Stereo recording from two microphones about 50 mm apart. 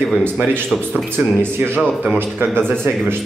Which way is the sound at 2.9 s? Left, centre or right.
Right.